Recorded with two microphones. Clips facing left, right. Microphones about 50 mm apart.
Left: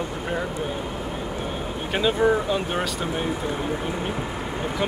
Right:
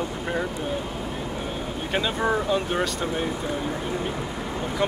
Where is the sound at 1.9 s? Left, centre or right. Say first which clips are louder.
Left 4 dB; centre.